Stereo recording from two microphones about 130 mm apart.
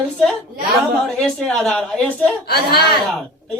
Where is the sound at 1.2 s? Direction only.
5° left (ahead or behind).